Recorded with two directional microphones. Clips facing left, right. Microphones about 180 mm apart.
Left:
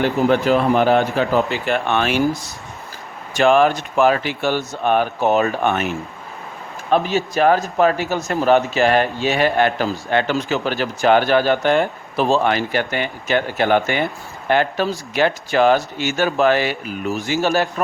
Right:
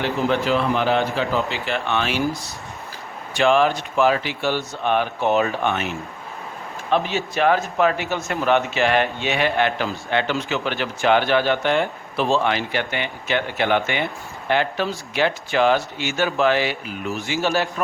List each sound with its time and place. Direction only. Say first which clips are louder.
0.4 s speech: left 5 dB; 45° left (ahead or behind)
6.9 s a man's voice: left 4 dB; 40° left (ahead or behind)